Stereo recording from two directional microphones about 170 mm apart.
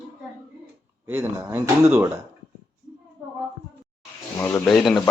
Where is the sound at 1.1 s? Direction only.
15° right (ahead or behind).